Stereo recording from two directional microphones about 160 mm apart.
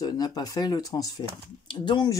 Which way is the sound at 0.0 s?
25° left (ahead or behind).